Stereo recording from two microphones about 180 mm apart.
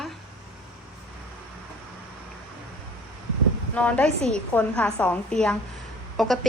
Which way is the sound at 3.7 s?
5° left (ahead or behind).